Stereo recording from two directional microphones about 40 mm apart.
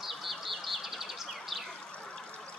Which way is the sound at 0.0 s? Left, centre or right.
Centre.